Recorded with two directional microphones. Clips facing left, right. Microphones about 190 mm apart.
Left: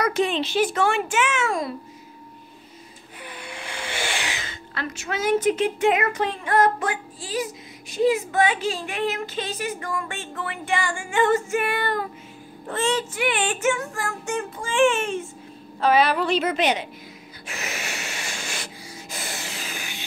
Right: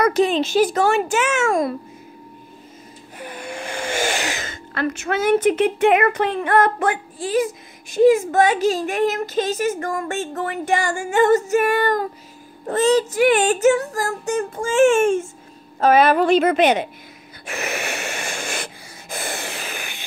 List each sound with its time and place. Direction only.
0.0 s speech: 40° right (ahead or behind)
3.2 s a woman's voice: 45° right (ahead or behind)
17.5 s sanding: 55° right (ahead or behind)